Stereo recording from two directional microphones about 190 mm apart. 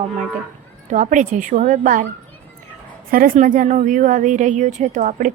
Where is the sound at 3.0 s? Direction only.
50° right (ahead or behind).